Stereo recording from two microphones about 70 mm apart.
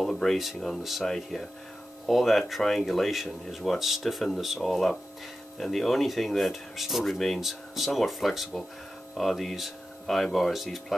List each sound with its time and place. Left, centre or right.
0.0 s speech: centre